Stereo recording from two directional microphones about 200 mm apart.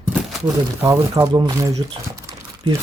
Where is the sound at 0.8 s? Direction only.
15° right (ahead or behind).